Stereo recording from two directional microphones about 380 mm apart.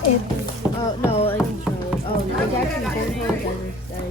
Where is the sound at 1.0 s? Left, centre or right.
Centre.